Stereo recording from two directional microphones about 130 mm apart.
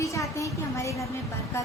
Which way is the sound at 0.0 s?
25° left (ahead or behind).